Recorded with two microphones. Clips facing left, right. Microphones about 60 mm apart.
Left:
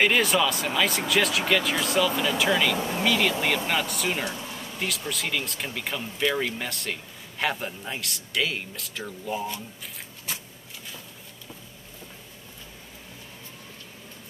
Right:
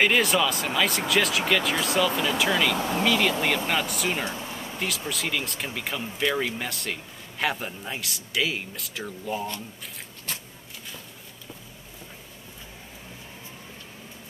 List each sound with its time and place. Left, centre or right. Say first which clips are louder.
0.0 s speech: even; centre
4.2 s speech: even; right
4.7 s speech: even; centre
10.3 s a sound: even; centre